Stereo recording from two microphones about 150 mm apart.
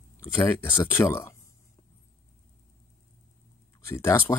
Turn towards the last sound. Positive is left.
turn(degrees=20)  # may be behind; listen again after turning